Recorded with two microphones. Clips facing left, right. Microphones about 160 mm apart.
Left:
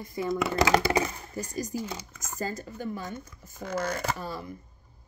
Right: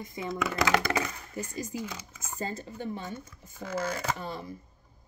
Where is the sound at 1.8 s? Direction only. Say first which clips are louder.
Left 2 dB; 30° left (ahead or behind).